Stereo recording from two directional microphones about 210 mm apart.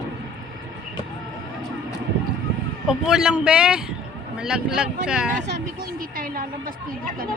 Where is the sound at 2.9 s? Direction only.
5° right (ahead or behind).